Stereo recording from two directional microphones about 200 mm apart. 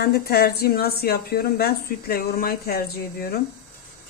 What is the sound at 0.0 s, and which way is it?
A woman's voice, 50° left (ahead or behind).